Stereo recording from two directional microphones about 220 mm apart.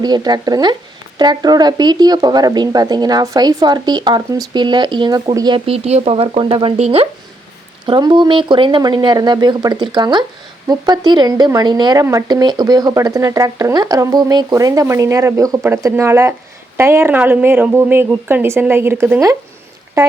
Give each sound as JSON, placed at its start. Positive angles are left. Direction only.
{"t": 0.0, "sound": "speech", "side_deg": -20}